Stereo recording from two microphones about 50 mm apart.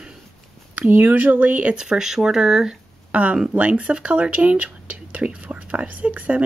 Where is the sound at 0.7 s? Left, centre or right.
Right.